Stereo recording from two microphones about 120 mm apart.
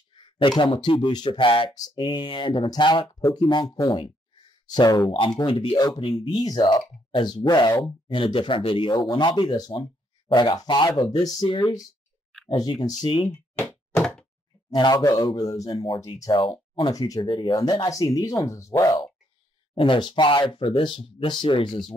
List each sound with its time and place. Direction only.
0.1 s speech: 40° left (ahead or behind)
13.3 s a sound: 20° left (ahead or behind)
14.7 s speech: 35° left (ahead or behind)
19.7 s speech: 45° left (ahead or behind)